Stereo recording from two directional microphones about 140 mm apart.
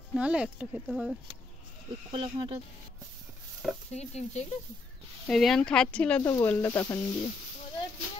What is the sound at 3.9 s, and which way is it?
Speech, 50° left (ahead or behind).